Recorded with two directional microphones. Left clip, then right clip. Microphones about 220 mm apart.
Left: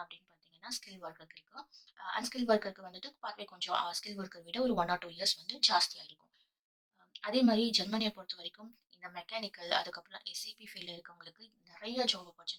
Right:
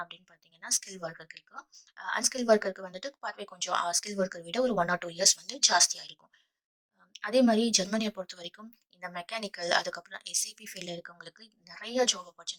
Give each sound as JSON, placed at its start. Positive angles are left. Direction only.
{"t": 2.1, "sound": "a woman's voice", "side_deg": -35}